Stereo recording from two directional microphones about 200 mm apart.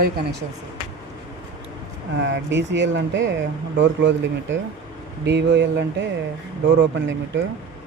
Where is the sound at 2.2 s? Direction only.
65° right (ahead or behind).